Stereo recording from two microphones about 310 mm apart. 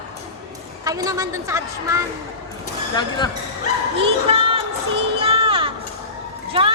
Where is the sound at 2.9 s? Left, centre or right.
Centre.